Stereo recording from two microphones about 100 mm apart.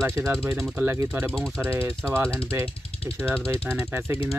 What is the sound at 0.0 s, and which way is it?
Speech, 25° right (ahead or behind).